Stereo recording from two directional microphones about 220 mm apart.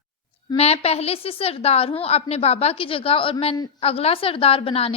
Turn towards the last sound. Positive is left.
turn(degrees=25)  # may be behind; listen again after turning